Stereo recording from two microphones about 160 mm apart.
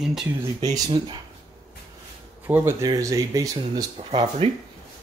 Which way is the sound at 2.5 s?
15° right (ahead or behind).